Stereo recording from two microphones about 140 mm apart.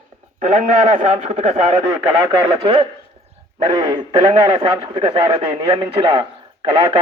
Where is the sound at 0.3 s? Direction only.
55° right (ahead or behind).